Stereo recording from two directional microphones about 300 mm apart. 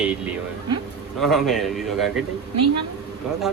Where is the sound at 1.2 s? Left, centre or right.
Centre.